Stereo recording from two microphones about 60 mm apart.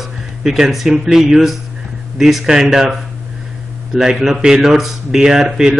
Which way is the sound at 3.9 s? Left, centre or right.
Centre.